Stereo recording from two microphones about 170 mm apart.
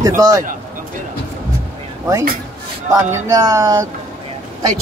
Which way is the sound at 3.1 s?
20° right (ahead or behind).